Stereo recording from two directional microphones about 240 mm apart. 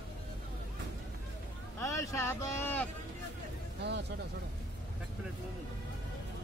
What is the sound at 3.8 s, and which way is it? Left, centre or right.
Speech, right.